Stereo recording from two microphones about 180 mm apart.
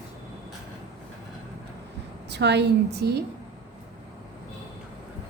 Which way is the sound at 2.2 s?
70° right (ahead or behind).